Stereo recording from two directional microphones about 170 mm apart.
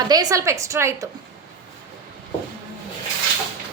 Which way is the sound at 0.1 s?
20° right (ahead or behind).